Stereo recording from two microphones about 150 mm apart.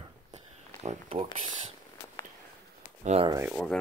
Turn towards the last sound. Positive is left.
turn(degrees=0)  # may be behind; listen again after turning